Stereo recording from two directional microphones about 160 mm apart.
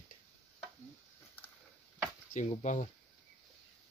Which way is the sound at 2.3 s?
45° left (ahead or behind).